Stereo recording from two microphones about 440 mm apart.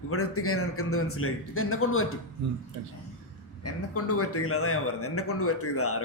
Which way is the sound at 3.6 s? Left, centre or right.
Left.